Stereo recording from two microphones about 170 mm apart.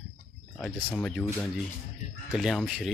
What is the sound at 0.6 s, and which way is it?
Speech, centre (ahead or behind).